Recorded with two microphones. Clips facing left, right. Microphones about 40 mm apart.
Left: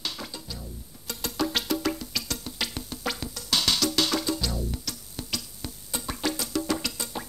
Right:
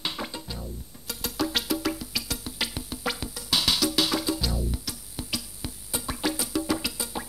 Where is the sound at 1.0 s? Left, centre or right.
Centre.